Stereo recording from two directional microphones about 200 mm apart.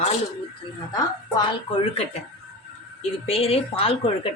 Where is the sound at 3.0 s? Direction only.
30° left (ahead or behind).